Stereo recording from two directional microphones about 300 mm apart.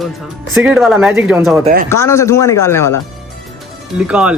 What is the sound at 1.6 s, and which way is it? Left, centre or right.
Speech, right.